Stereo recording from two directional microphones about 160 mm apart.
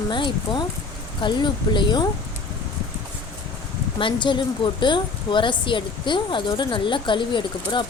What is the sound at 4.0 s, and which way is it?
A woman's voice, 30° left (ahead or behind).